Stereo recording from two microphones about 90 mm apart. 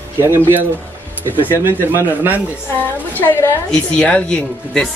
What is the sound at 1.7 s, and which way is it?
Speech, 25° right (ahead or behind).